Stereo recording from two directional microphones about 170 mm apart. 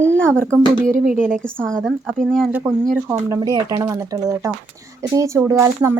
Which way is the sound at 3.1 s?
15° right (ahead or behind).